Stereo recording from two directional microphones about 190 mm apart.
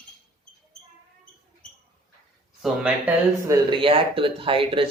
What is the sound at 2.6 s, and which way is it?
Speech, 5° right (ahead or behind).